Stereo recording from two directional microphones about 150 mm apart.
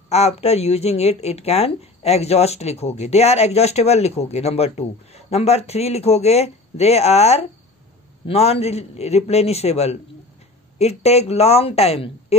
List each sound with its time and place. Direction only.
0.1 s speech: 45° left (ahead or behind)